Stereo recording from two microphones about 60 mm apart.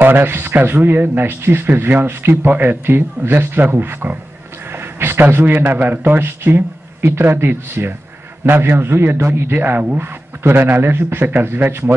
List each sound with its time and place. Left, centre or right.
0.0 s a man's voice: right